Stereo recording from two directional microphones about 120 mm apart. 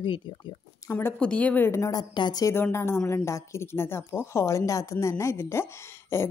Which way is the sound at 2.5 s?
20° left (ahead or behind).